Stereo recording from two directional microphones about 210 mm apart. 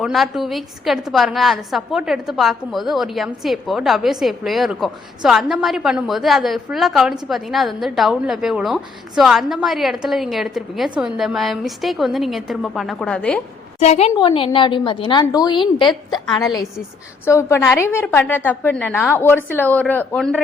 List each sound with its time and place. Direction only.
0.0 s a woman's voice: centre (ahead or behind)
13.7 s a woman's voice: 30° left (ahead or behind)
17.2 s a woman's voice: 15° left (ahead or behind)